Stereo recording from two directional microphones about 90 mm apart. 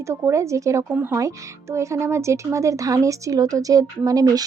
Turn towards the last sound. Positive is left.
turn(degrees=-45)  # may be behind; listen again after turning